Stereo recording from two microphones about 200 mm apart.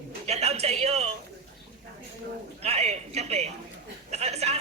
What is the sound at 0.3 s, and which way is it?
Speech, 30° right (ahead or behind).